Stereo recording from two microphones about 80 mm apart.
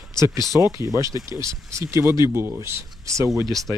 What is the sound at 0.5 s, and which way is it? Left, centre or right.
Speech, right.